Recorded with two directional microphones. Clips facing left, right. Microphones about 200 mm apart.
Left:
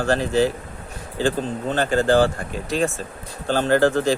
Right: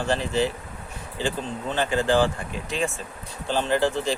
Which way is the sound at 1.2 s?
45° left (ahead or behind).